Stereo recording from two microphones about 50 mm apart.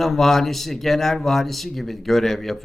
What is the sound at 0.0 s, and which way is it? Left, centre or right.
Speech, centre.